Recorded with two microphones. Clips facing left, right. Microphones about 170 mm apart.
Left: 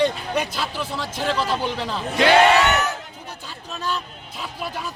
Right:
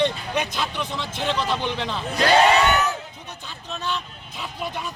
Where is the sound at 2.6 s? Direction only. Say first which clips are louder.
Even; 75° left (ahead or behind).